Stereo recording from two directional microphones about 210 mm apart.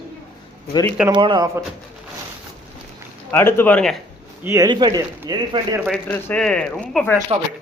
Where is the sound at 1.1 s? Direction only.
20° right (ahead or behind).